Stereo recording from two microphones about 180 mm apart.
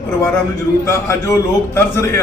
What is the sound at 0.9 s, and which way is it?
Speech, 15° left (ahead or behind).